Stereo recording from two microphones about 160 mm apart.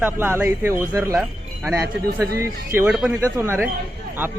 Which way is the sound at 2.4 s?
15° right (ahead or behind).